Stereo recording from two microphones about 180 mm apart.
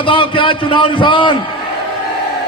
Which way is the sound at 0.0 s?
30° left (ahead or behind).